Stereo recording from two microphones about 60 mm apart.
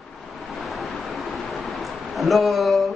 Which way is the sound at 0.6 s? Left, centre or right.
Centre.